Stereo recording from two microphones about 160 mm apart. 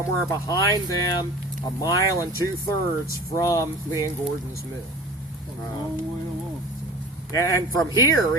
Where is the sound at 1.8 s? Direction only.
20° left (ahead or behind).